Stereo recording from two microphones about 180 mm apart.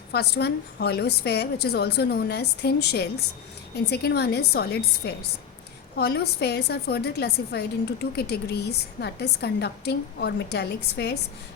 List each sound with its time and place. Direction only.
0.1 s a woman's voice: 65° left (ahead or behind)